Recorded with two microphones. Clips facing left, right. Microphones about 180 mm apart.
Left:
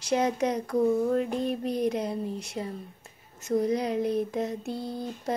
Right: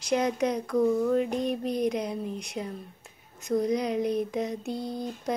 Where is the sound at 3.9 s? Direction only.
15° right (ahead or behind).